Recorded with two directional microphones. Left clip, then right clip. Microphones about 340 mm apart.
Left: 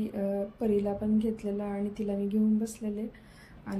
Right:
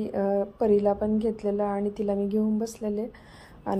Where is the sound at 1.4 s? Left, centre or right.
Right.